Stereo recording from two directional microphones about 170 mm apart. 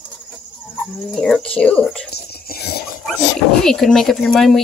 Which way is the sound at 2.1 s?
70° left (ahead or behind).